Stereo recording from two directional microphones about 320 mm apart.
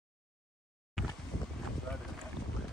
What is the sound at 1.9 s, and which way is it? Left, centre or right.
Boat, centre.